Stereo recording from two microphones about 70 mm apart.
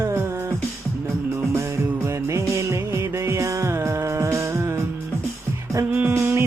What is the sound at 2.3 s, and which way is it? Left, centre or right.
Music, right.